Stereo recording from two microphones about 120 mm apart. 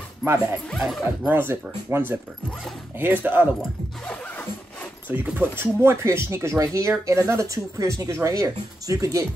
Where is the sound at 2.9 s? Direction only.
15° right (ahead or behind).